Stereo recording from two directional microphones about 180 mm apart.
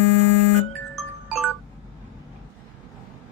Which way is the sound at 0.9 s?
Centre (ahead or behind).